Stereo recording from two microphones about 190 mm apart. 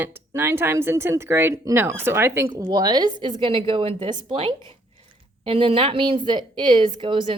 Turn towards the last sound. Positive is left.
turn(degrees=-25)  # may be behind; listen again after turning